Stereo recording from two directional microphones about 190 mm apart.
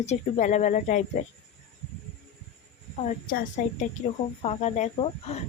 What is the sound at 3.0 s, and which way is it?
Speech, 45° left (ahead or behind).